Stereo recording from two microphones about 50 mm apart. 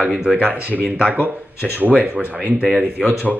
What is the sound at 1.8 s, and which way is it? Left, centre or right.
Speech, right.